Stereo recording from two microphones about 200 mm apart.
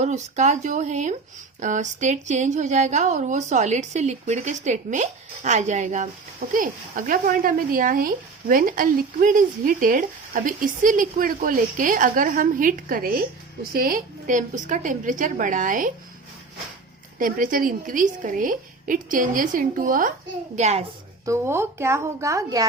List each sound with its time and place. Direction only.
0.0 s a woman's voice: 35° right (ahead or behind)
17.2 s a woman's voice: 45° right (ahead or behind)
21.2 s speech: 15° right (ahead or behind)